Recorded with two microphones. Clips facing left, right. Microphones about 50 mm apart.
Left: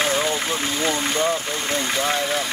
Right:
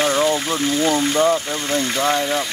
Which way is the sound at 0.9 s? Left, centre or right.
Right.